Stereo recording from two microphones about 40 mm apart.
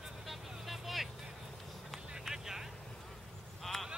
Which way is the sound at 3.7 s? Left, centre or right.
Centre.